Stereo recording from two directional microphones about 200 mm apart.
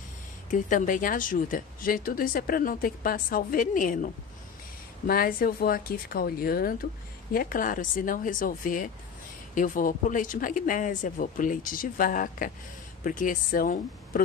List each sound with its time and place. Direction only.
0.5 s speech: 40° left (ahead or behind)